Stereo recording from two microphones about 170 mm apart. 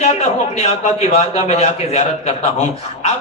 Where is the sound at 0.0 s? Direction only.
40° left (ahead or behind).